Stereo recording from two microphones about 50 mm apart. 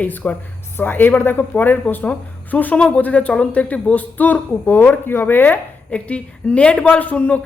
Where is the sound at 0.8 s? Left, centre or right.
Left.